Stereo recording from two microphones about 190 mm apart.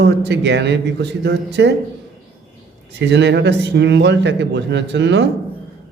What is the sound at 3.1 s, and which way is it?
A man's voice, 65° right (ahead or behind).